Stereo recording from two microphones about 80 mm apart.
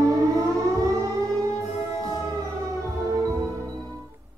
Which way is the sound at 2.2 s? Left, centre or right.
Right.